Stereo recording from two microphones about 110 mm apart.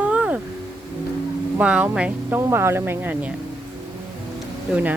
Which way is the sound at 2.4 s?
25° right (ahead or behind).